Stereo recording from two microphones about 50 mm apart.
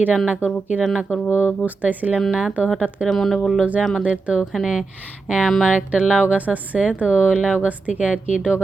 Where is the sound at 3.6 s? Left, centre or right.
Right.